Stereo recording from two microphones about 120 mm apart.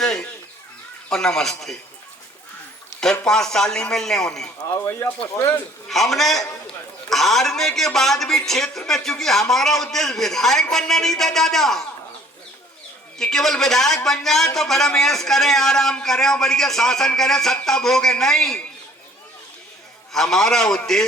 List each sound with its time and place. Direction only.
0.0 s chicken: 5° left (ahead or behind)
1.1 s a man's voice: 5° left (ahead or behind)
3.0 s a man's voice: 5° left (ahead or behind)
4.7 s speech: 20° left (ahead or behind)
5.9 s a man's voice: centre (ahead or behind)
13.1 s a man's voice: 5° left (ahead or behind)
20.1 s a man's voice: 5° left (ahead or behind)